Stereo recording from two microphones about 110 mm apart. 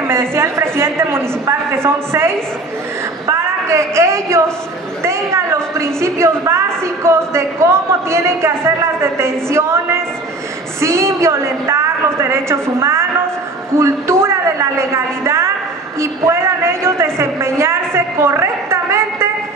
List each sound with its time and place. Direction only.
0.0 s a woman's voice: 20° right (ahead or behind)
13.7 s a sound: 25° right (ahead or behind)
16.0 s a woman's voice: 25° right (ahead or behind)